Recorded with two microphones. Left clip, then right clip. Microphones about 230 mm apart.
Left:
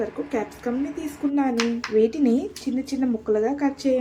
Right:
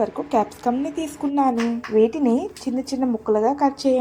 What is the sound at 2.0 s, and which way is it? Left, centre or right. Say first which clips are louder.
A woman's voice: right 2 dB; centre.